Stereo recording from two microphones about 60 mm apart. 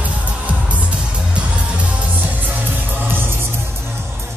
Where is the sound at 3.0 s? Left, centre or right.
Right.